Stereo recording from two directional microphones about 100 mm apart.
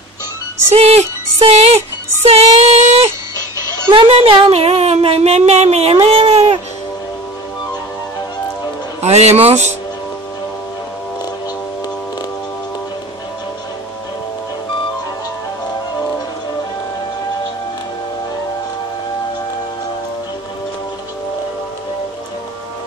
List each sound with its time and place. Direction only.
0.7 s music: 90° right
3.9 s a woman's voice: 85° right
4.5 s music: 90° right; by 6.6 s 65° right (ahead or behind)
9.0 s music: 90° right